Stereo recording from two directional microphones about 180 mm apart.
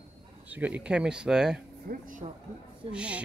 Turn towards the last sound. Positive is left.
turn(degrees=-5)  # may be behind; listen again after turning